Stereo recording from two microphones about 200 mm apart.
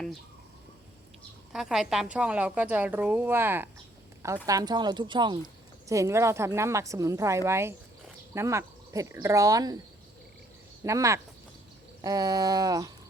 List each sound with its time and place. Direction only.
1.5 s a woman's voice: centre (ahead or behind); by 9.7 s 20° right (ahead or behind)
10.8 s a woman's voice: 15° right (ahead or behind)